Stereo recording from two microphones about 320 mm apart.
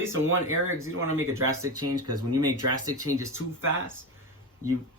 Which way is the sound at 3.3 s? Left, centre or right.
Right.